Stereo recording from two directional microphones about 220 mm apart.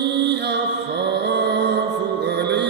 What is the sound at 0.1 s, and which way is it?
Music, 50° right (ahead or behind).